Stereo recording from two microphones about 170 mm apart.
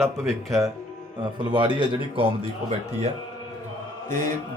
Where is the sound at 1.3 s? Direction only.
25° right (ahead or behind).